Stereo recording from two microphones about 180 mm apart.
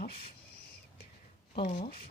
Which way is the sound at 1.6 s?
50° left (ahead or behind).